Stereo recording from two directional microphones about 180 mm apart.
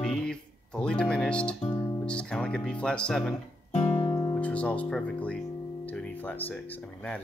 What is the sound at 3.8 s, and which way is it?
Music, 25° left (ahead or behind).